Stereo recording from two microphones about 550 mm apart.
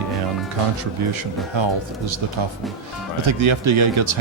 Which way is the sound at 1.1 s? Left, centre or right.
Right.